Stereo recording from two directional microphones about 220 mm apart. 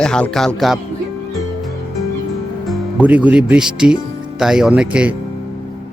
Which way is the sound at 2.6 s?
5° right (ahead or behind).